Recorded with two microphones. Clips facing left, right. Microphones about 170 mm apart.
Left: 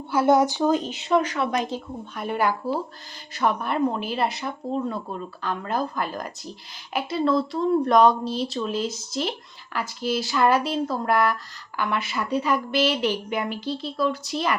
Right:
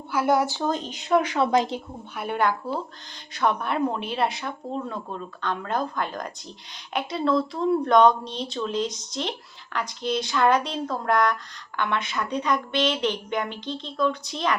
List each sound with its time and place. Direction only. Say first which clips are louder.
0.1 s speech: left 3 dB; 25° left (ahead or behind); by 1.2 s 5° left (ahead or behind)
1.4 s a woman's voice: right 4 dB; 25° right (ahead or behind)
2.1 s speech: even; centre (ahead or behind)